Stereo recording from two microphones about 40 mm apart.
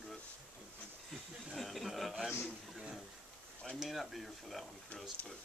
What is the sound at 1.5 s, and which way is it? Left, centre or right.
Speech, centre.